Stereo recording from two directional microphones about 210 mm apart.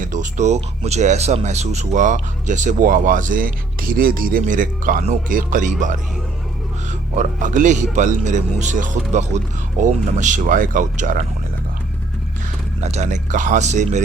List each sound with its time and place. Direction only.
0.0 s speech: 35° right (ahead or behind)
7.2 s speech: 35° right (ahead or behind)
12.8 s speech: 30° right (ahead or behind)